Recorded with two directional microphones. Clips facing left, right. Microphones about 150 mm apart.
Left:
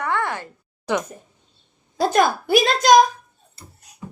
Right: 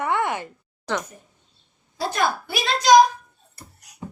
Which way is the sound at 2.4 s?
45° left (ahead or behind).